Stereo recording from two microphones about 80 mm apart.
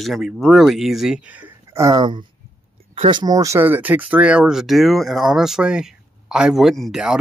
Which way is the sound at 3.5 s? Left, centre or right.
Right.